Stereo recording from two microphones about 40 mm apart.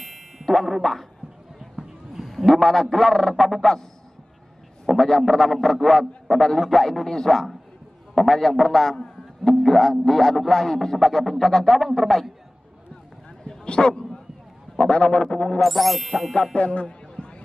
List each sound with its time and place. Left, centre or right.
0.0 s a sound: centre
0.5 s a man's voice: centre
2.2 s a man's voice: centre
4.8 s a man's voice: centre
13.4 s bow-wow: left
14.9 s speech: left
15.6 s a man's voice: centre
16.5 s a man's voice: left
16.8 s a sound: left